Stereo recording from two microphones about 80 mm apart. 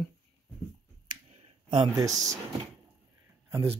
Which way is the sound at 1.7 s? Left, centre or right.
Right.